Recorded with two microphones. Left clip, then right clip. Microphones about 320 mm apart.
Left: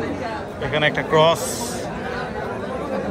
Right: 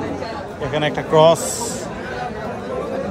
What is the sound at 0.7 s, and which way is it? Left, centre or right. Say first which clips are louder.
Speech: right 1 dB; centre.